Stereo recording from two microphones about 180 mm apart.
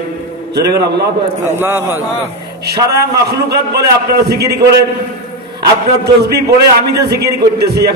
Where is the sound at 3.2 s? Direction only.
60° right (ahead or behind).